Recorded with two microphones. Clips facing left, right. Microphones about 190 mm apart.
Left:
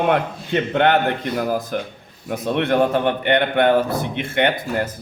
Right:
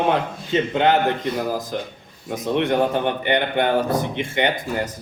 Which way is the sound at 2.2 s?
60° left (ahead or behind).